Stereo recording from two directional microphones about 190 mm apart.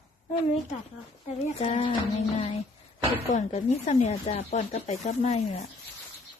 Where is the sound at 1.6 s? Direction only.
30° left (ahead or behind).